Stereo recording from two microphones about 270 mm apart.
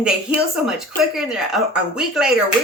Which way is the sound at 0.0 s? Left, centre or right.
Centre.